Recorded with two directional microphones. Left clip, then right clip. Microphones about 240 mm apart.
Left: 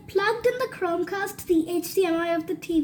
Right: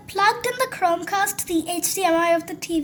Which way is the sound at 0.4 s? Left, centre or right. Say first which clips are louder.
Right 3 dB; centre.